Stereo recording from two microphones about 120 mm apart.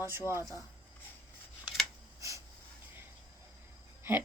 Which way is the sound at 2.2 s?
25° right (ahead or behind).